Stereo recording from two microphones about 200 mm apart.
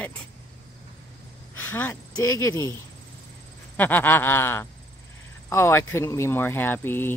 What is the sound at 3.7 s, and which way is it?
Speech, 10° left (ahead or behind).